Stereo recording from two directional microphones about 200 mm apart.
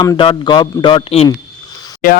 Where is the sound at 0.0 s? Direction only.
25° left (ahead or behind).